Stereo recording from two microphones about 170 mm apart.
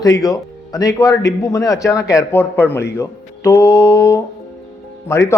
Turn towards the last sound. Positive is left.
turn(degrees=15)  # may be behind; listen again after turning